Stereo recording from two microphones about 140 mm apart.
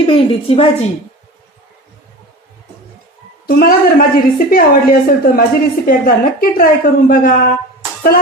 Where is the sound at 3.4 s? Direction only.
90° left.